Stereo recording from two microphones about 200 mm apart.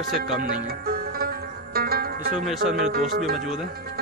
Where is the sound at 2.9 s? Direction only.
45° right (ahead or behind).